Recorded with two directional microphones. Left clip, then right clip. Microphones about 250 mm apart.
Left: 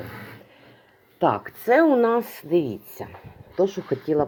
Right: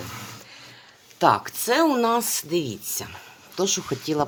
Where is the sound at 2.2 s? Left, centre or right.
Right.